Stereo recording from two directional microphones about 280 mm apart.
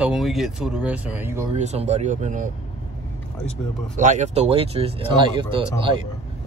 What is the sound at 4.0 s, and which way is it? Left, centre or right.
Speech, right.